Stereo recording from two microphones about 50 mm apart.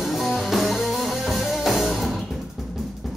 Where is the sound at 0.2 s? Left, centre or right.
Centre.